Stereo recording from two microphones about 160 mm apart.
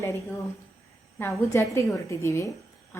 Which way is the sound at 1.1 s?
15° left (ahead or behind).